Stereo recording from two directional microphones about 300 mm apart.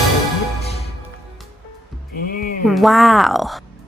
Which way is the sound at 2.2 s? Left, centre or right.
Left.